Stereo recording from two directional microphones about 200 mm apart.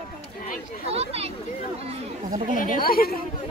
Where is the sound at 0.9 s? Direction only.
30° right (ahead or behind).